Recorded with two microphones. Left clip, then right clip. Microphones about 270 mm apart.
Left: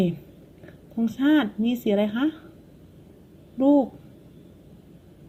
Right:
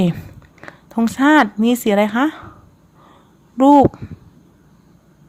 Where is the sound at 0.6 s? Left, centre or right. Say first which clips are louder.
Right 8 dB; right.